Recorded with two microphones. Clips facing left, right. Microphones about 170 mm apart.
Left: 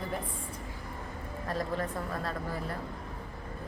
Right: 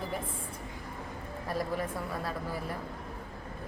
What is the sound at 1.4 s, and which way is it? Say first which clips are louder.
Speech: even; 10° right (ahead or behind).